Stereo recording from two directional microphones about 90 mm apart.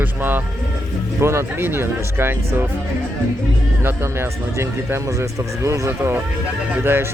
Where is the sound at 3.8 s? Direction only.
25° right (ahead or behind).